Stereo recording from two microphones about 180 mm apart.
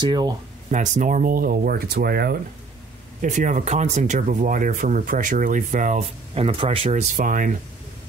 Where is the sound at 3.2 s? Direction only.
45° right (ahead or behind).